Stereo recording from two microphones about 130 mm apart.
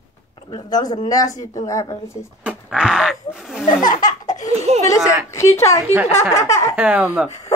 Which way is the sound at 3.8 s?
90° left.